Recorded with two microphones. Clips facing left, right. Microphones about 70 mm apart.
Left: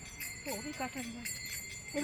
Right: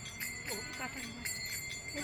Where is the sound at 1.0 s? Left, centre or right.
Right.